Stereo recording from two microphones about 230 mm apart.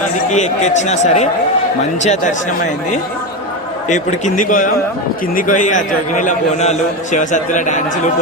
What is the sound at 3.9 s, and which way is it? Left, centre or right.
A man's voice, left.